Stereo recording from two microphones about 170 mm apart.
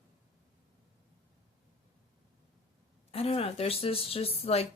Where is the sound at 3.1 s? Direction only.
35° left (ahead or behind).